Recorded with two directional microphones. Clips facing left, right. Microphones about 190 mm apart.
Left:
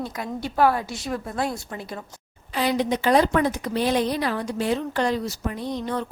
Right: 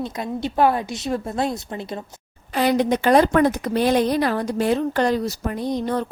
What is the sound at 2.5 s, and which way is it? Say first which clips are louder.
A woman's voice: right 4 dB; 50° right (ahead or behind).